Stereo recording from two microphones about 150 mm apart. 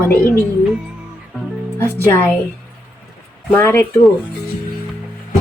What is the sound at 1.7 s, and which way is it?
Speech, 15° left (ahead or behind).